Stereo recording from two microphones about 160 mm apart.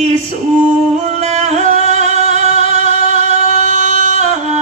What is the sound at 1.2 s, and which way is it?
Music, 45° right (ahead or behind).